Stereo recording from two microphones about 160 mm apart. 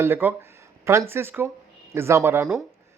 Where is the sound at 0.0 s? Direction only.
15° right (ahead or behind).